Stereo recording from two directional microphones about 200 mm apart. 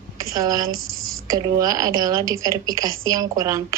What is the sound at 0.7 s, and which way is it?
Speech, 90° right.